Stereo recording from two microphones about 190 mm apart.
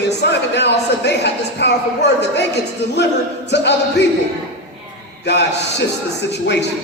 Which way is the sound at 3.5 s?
65° left (ahead or behind).